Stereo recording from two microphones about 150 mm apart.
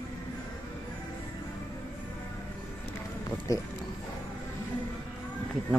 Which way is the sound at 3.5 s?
25° left (ahead or behind).